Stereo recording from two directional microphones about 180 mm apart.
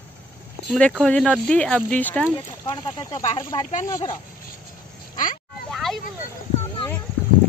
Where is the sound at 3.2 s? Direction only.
35° left (ahead or behind).